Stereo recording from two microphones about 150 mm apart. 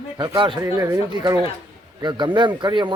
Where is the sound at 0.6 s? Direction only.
20° right (ahead or behind).